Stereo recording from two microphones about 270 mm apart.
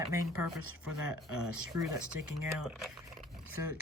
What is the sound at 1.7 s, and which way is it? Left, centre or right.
Speech, right.